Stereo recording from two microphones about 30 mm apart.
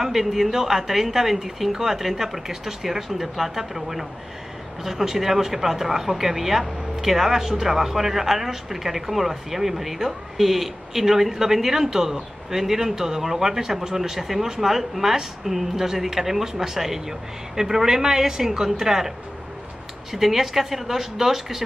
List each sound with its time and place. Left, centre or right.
0.0 s speech: centre